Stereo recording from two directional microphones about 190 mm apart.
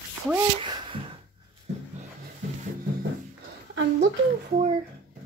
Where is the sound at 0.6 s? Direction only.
25° right (ahead or behind).